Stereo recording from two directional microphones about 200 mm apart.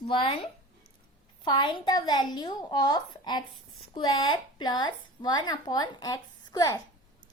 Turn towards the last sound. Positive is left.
turn(degrees=20)  # may be behind; listen again after turning